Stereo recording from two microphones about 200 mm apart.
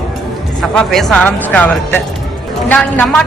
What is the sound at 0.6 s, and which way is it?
A woman's voice, centre (ahead or behind).